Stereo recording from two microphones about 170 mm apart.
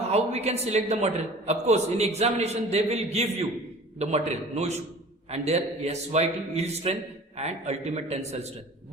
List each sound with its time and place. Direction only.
0.1 s a man's voice: 40° right (ahead or behind)